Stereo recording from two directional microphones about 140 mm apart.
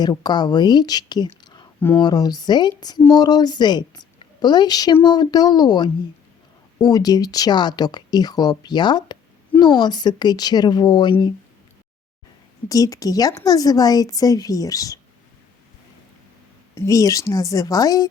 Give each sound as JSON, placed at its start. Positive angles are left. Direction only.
{"t": 0.0, "sound": "speech", "side_deg": 30}
{"t": 12.6, "sound": "speech", "side_deg": 25}
{"t": 16.7, "sound": "speech", "side_deg": 25}